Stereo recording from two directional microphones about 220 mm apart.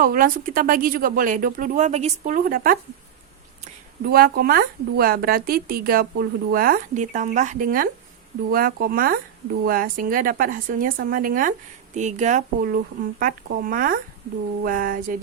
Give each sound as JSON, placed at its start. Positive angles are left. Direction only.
{"t": 0.0, "sound": "a woman's voice", "side_deg": -40}